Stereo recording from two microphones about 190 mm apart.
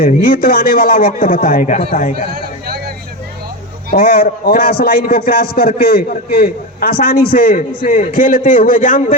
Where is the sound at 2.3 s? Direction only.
55° right (ahead or behind).